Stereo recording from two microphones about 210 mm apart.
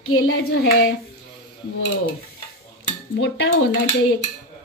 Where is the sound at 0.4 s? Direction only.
50° left (ahead or behind).